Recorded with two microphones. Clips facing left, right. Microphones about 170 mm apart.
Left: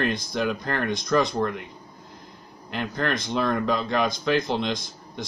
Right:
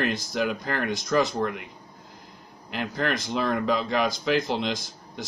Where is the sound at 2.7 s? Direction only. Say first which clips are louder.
Left 1 dB; 5° right (ahead or behind).